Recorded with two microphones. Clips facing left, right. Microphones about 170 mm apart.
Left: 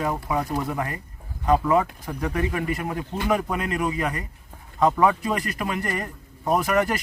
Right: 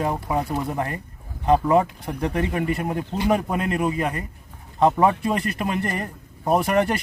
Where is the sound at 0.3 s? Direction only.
30° right (ahead or behind).